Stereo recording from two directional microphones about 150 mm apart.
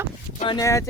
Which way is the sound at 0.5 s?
20° left (ahead or behind).